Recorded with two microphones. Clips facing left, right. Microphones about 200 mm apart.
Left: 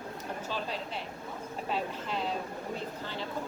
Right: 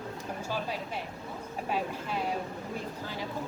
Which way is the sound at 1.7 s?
10° right (ahead or behind).